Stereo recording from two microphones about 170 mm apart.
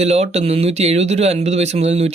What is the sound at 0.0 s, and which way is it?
Speech, 40° right (ahead or behind).